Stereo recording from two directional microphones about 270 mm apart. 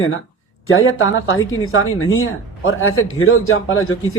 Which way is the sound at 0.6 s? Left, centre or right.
Left.